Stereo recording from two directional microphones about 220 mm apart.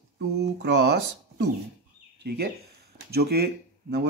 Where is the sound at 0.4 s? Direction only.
50° right (ahead or behind).